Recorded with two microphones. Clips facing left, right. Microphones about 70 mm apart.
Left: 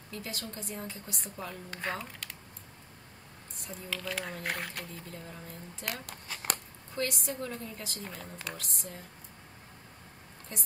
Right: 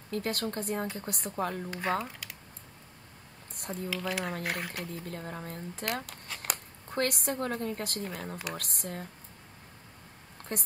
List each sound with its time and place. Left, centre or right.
0.1 s speech: right
1.7 s speech: centre
2.2 s typing: centre
3.9 s speech: centre
5.0 s speech: right
6.0 s a sound: centre
6.9 s speech: right
10.5 s speech: right